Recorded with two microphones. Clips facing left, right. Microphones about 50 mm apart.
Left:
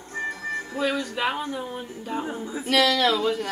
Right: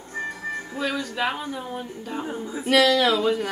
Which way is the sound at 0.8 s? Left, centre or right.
Centre.